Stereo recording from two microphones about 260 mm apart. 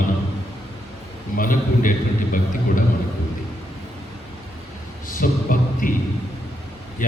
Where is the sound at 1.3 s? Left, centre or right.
Left.